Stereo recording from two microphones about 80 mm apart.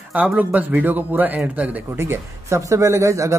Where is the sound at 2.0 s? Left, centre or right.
Right.